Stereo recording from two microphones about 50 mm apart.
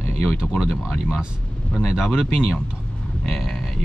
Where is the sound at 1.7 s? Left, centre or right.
Left.